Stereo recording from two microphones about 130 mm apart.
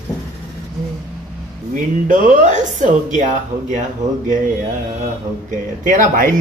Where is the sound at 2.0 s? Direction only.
80° right.